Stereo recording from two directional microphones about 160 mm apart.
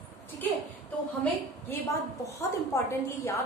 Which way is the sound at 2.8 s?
15° left (ahead or behind).